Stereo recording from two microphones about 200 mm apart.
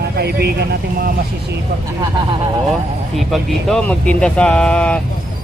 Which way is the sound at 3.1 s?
Centre (ahead or behind).